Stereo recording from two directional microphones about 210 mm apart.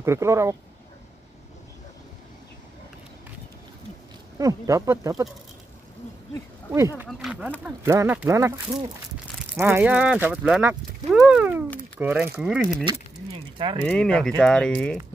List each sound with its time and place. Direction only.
0.0 s speech: 15° right (ahead or behind)
4.4 s speech: 15° right (ahead or behind)
7.1 s speech: centre (ahead or behind)
13.6 s speech: 25° right (ahead or behind)
13.8 s speech: 5° left (ahead or behind)